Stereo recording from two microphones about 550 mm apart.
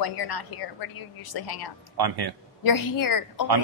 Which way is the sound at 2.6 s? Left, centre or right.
Left.